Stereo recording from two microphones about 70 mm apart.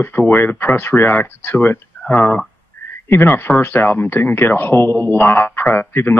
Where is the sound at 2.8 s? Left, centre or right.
Left.